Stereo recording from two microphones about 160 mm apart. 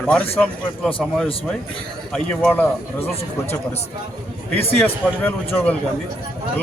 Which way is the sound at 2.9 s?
40° left (ahead or behind).